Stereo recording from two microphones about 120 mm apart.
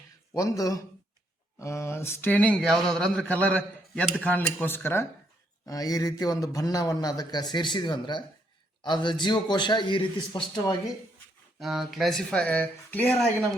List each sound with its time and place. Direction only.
0.3 s speech: 30° left (ahead or behind)
5.6 s a man's voice: 30° left (ahead or behind)
11.6 s speech: centre (ahead or behind)